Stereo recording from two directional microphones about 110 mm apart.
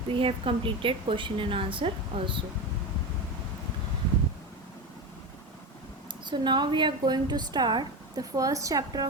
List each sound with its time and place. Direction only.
0.1 s a woman's voice: 55° right (ahead or behind)
6.2 s a woman's voice: 45° right (ahead or behind)